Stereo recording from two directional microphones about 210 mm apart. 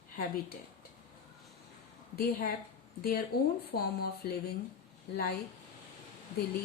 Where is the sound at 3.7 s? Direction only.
50° left (ahead or behind).